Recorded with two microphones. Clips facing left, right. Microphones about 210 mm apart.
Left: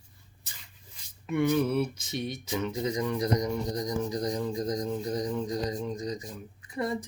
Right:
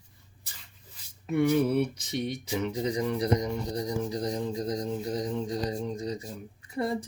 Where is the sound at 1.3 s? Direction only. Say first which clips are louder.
Right 2 dB; 30° right (ahead or behind).